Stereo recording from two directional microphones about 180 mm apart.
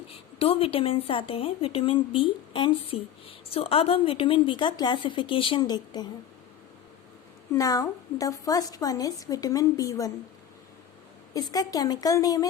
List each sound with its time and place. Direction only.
0.1 s a woman's voice: 30° left (ahead or behind)
7.5 s a woman's voice: 20° left (ahead or behind)
11.3 s a woman's voice: 20° left (ahead or behind)